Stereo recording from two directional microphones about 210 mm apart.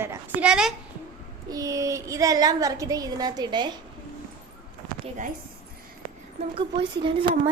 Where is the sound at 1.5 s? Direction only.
15° right (ahead or behind).